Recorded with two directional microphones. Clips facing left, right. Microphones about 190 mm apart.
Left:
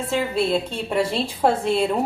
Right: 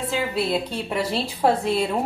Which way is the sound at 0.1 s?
5° right (ahead or behind).